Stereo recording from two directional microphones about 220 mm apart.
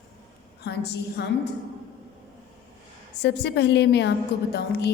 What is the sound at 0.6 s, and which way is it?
Speech, 50° left (ahead or behind).